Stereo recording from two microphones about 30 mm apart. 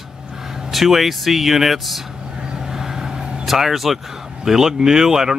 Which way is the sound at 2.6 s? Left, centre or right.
Centre.